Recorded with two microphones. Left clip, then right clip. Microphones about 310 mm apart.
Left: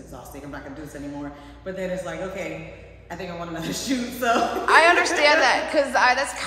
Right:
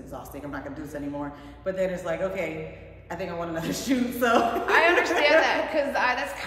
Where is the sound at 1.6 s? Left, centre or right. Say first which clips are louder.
Right 2 dB; centre.